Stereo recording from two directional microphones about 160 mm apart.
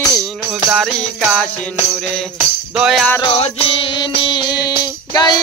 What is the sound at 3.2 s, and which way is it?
Music, 35° left (ahead or behind).